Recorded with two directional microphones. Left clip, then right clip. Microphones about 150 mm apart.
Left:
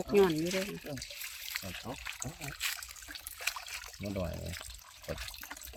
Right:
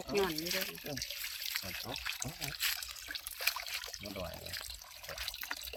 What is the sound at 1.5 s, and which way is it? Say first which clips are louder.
Water: left 1 dB; 15° left (ahead or behind).